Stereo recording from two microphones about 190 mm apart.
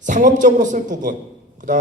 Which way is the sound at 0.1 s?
40° right (ahead or behind).